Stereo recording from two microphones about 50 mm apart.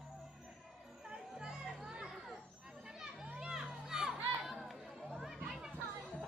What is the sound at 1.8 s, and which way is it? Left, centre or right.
Children playing, centre.